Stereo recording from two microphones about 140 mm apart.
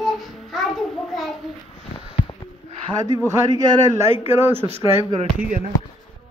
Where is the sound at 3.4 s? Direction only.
25° right (ahead or behind).